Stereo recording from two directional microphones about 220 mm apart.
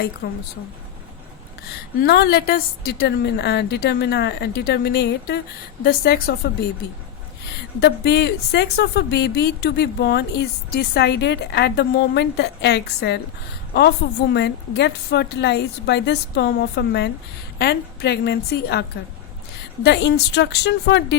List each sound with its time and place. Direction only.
0.2 s speech: 50° left (ahead or behind)
2.0 s speech: 45° left (ahead or behind)
7.8 s speech: 50° left (ahead or behind)